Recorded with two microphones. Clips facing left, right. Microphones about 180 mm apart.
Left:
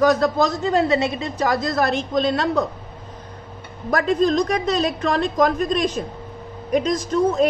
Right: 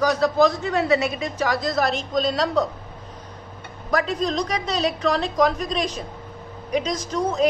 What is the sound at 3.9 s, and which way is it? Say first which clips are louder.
A woman's voice: left 5 dB; 50° left (ahead or behind).